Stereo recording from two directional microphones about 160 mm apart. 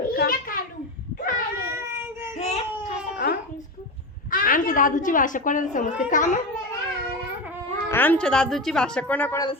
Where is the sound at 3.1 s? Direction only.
70° left (ahead or behind).